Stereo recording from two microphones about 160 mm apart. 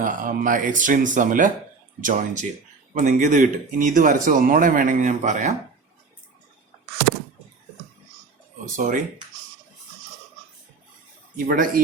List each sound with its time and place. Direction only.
0.0 s speech: 55° right (ahead or behind)
8.7 s speech: 50° right (ahead or behind)
11.4 s speech: 60° right (ahead or behind)